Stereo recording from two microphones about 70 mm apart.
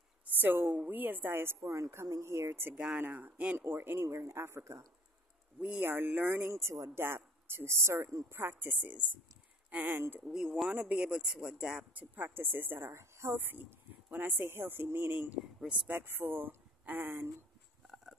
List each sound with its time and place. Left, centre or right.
0.3 s a woman's voice: right
2.7 s speech: centre
3.0 s speech: right
3.5 s speech: right
5.6 s speech: centre
5.9 s speech: right
10.2 s speech: centre
10.7 s speech: centre
11.9 s speech: right
12.9 s a woman's voice: right
13.4 s speech: right